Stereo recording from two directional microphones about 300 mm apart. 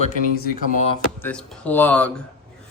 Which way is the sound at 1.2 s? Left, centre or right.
Centre.